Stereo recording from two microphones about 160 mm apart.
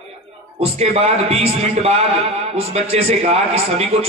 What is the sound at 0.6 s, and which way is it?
A man's voice, 40° right (ahead or behind).